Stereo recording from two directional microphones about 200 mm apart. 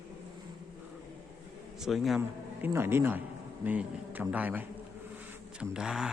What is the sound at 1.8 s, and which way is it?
Speech, centre (ahead or behind).